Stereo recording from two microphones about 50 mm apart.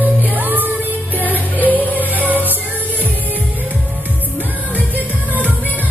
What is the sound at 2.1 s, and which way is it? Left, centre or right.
Music, right.